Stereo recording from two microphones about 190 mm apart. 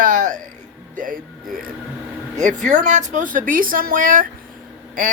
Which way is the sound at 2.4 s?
40° right (ahead or behind).